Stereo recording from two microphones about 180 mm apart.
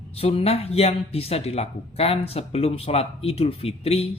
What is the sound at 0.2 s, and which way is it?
Speech, 35° left (ahead or behind).